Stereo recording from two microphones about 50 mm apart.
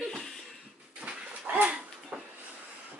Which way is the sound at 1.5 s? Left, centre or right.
Right.